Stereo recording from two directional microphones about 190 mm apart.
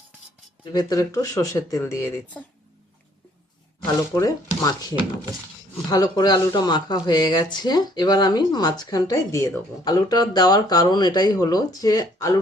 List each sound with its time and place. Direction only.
0.6 s speech: 20° left (ahead or behind)
3.8 s speech: 15° left (ahead or behind)
5.9 s speech: 20° left (ahead or behind)